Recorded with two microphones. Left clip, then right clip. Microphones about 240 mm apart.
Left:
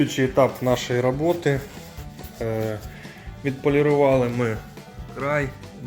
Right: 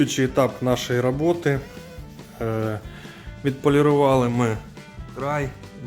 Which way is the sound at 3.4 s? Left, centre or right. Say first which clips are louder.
Right 1 dB; right.